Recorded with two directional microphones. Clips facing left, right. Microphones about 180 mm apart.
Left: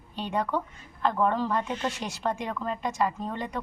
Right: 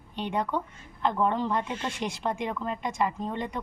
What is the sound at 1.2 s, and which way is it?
Speech, 20° right (ahead or behind).